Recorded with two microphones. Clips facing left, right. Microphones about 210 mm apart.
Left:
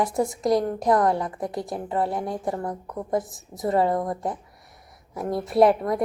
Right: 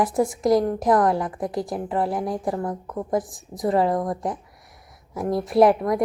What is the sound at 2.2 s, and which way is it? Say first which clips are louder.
A woman's voice: right 2 dB; 25° left (ahead or behind).